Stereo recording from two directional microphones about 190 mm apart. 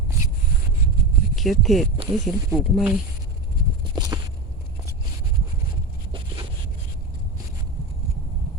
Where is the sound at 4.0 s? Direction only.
20° right (ahead or behind).